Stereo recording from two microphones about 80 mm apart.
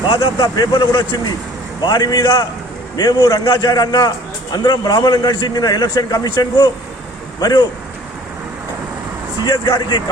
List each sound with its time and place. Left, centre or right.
0.3 s a man's voice: left
9.6 s a man's voice: left